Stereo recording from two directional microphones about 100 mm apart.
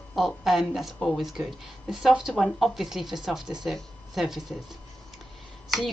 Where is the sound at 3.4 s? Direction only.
45° right (ahead or behind).